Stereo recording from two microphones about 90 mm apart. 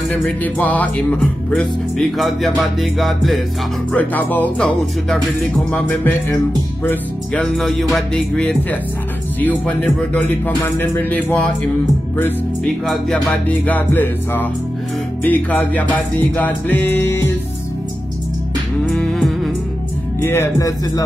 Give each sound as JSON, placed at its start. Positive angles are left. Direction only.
{"t": 0.4, "sound": "music", "side_deg": 20}
{"t": 1.5, "sound": "music", "side_deg": 5}
{"t": 3.9, "sound": "speech", "side_deg": 20}
{"t": 5.7, "sound": "music", "side_deg": 20}
{"t": 7.3, "sound": "music", "side_deg": 0}
{"t": 9.4, "sound": "speech", "side_deg": 15}
{"t": 10.6, "sound": "music", "side_deg": 20}
{"t": 12.6, "sound": "music", "side_deg": 0}
{"t": 13.7, "sound": "music", "side_deg": 20}
{"t": 18.9, "sound": "humming", "side_deg": 5}
{"t": 20.2, "sound": "speech", "side_deg": 30}